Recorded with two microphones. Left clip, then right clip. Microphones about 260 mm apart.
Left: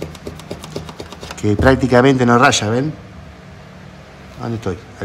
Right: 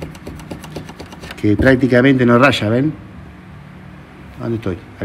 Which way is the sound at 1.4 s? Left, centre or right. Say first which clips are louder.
Right 1 dB; centre.